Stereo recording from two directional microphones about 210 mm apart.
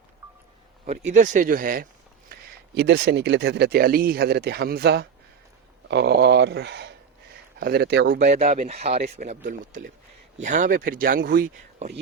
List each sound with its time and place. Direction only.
1.1 s speech: 35° right (ahead or behind)
2.3 s speech: 55° right (ahead or behind)
8.3 s speech: 35° right (ahead or behind)
9.5 s speech: 45° right (ahead or behind)
10.3 s speech: 35° right (ahead or behind)